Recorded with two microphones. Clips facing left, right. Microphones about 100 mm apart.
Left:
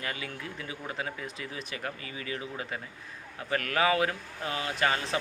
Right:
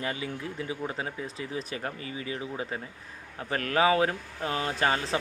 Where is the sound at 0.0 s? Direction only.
25° right (ahead or behind).